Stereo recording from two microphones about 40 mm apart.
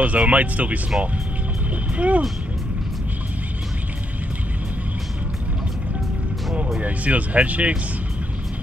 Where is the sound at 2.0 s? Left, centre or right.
Right.